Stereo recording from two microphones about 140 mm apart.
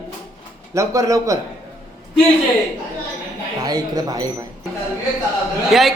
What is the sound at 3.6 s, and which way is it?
Speech, 30° right (ahead or behind).